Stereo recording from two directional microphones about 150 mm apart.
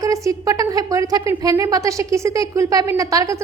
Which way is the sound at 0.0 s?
20° right (ahead or behind).